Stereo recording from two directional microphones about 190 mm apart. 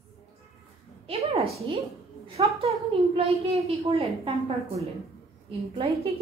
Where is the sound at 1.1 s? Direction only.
30° right (ahead or behind).